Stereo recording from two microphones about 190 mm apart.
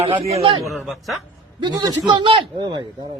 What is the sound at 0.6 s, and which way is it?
Speech, centre (ahead or behind).